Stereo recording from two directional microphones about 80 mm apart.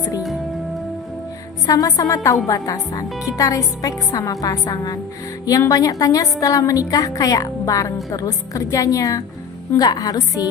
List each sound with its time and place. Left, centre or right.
1.6 s a woman's voice: left